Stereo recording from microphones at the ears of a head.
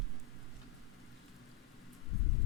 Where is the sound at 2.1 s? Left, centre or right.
Left.